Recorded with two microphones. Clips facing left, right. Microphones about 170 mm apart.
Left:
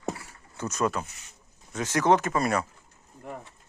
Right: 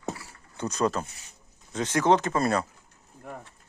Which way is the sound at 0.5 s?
30° right (ahead or behind).